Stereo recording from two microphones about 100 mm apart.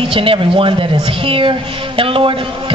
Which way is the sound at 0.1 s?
65° right (ahead or behind).